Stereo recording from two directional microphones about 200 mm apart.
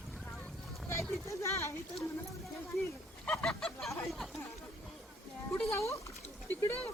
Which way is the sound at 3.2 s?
5° left (ahead or behind).